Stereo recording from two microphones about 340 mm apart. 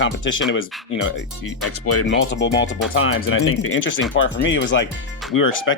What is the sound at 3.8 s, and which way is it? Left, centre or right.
Speech, left.